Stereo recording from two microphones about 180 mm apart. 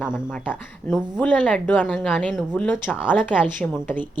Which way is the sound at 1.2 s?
10° left (ahead or behind).